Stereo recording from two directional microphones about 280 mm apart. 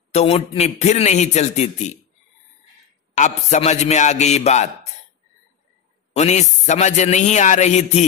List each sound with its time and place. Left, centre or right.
0.1 s a man's voice: left
3.2 s a man's voice: left
6.1 s a man's voice: left